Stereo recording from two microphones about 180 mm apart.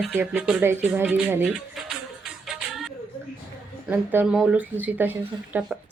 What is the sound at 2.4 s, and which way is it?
Music, centre (ahead or behind).